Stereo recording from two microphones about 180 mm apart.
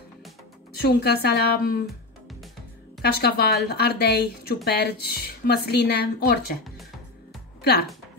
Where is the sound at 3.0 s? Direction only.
60° left (ahead or behind).